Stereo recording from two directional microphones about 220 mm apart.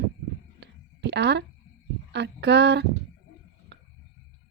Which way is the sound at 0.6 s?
50° right (ahead or behind).